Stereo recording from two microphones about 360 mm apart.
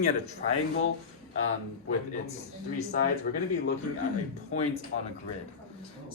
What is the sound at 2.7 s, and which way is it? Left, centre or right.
Speech, left.